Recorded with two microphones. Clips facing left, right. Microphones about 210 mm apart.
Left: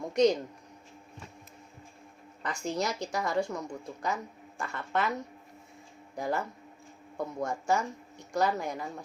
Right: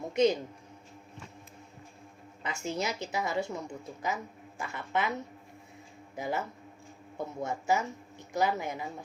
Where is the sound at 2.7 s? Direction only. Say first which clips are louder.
Left 2 dB; 20° right (ahead or behind).